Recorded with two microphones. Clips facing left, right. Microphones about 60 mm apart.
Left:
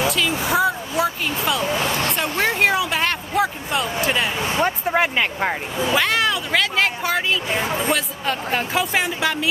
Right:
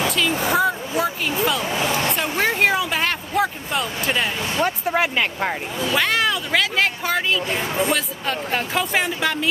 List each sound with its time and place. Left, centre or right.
0.1 s speech: centre
2.0 s a sound: centre
4.4 s speech: centre
4.6 s speech: centre
7.4 s speech: centre
7.8 s speech: centre